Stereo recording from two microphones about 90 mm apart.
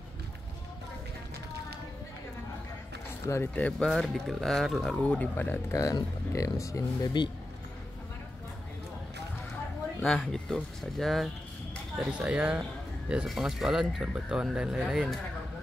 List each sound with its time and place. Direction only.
3.5 s speech: 15° left (ahead or behind)
3.9 s speech: centre (ahead or behind)
5.0 s speech: 15° left (ahead or behind)
5.7 s speech: 35° left (ahead or behind)
10.0 s speech: 5° left (ahead or behind)
12.0 s speech: 10° right (ahead or behind)